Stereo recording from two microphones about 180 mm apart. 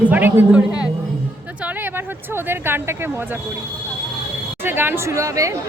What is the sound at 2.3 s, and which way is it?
Speech, 10° right (ahead or behind).